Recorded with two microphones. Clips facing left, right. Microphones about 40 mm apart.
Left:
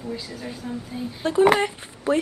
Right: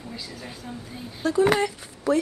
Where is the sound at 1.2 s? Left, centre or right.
Left.